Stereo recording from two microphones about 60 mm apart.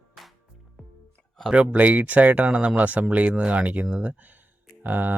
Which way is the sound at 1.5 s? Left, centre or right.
Right.